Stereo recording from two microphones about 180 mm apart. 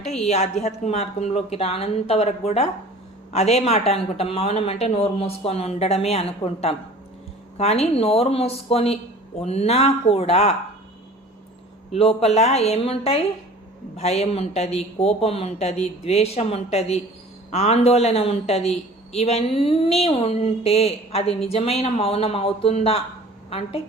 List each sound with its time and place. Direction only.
0.3 s speech: 35° left (ahead or behind)
11.9 s speech: 35° left (ahead or behind)